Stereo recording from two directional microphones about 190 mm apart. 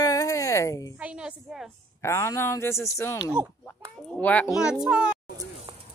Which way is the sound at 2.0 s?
15° left (ahead or behind).